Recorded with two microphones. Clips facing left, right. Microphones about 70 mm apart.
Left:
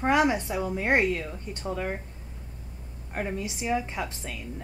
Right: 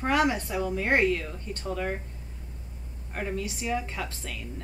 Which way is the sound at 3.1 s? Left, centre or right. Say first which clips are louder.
Left 1 dB; centre.